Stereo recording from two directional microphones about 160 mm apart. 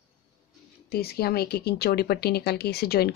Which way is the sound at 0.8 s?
75° left (ahead or behind).